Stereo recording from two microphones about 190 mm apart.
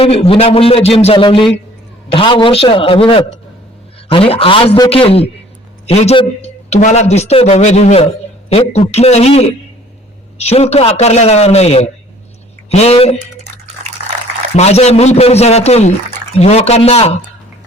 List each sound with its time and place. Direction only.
0.0 s a man's voice: 30° left (ahead or behind)
14.5 s a man's voice: 35° left (ahead or behind)